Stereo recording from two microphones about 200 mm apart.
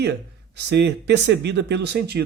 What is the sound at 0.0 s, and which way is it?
Speech, 60° right (ahead or behind).